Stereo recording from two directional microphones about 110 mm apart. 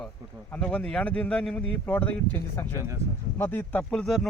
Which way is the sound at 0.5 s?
10° left (ahead or behind).